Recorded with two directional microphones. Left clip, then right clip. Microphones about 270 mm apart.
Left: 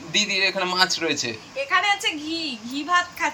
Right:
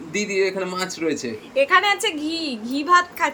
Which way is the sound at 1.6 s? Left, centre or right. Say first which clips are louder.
Right 2 dB; right.